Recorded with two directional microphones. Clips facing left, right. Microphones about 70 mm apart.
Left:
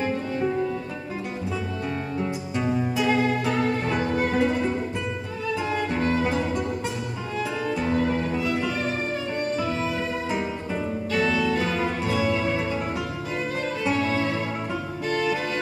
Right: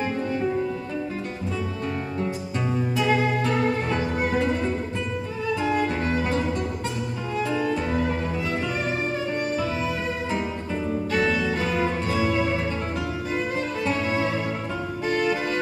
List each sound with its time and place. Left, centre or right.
3.0 s music: centre
11.1 s music: right